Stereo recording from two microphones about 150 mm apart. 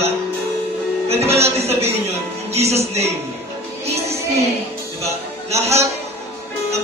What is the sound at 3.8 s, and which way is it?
Music, 45° right (ahead or behind).